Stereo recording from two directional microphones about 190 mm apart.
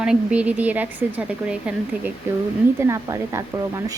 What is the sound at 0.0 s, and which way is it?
A child's voice, 5° right (ahead or behind).